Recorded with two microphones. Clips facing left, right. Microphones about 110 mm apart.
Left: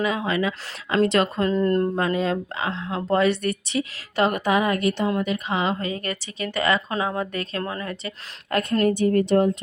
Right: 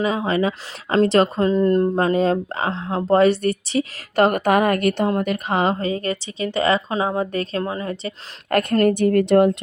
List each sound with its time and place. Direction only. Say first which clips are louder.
0.0 s speech: right 3 dB; 35° right (ahead or behind)
1.5 s speech: right 4 dB; 20° right (ahead or behind)
2.0 s a woman's voice: right 5 dB; 35° right (ahead or behind); by 5.7 s 50° right (ahead or behind)
5.8 s speech: right 5 dB; 30° right (ahead or behind)
8.4 s a woman's voice: right 4 dB; 55° right (ahead or behind); by 9.5 s 75° right (ahead or behind)